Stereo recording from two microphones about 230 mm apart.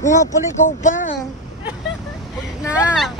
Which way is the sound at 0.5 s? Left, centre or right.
Left.